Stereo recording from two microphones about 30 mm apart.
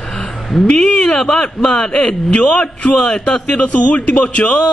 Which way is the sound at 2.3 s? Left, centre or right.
Left.